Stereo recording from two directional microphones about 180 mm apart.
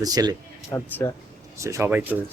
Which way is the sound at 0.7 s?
15° left (ahead or behind).